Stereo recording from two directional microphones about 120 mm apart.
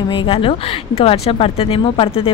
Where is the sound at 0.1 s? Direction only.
45° left (ahead or behind).